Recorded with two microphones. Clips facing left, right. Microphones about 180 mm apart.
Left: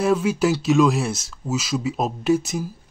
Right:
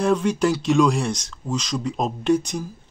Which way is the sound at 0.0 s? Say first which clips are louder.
Even; 5° left (ahead or behind).